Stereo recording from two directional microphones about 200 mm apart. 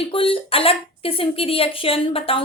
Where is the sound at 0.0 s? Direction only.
25° left (ahead or behind).